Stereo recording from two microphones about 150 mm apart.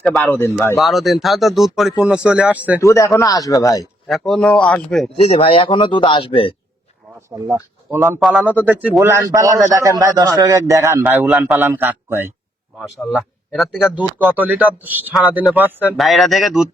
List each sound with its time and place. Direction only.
0.3 s speech: 15° left (ahead or behind)
0.8 s speech: centre (ahead or behind)
2.8 s a man's voice: 20° left (ahead or behind)
4.0 s speech: centre (ahead or behind)
5.4 s speech: 35° left (ahead or behind)
7.3 s a man's voice: 15° right (ahead or behind)
13.0 s speech: centre (ahead or behind)
16.0 s speech: centre (ahead or behind)